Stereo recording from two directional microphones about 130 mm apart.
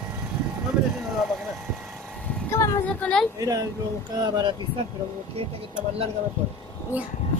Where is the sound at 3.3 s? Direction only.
25° right (ahead or behind).